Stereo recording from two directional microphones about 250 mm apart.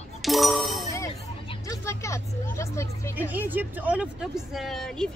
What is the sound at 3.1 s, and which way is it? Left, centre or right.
Speech, centre.